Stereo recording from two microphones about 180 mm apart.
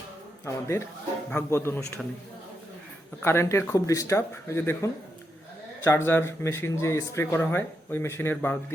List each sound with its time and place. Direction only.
0.4 s speech: 15° left (ahead or behind)
3.2 s speech: 15° left (ahead or behind)